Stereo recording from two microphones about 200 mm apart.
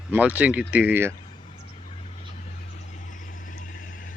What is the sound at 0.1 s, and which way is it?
Speech, 10° right (ahead or behind).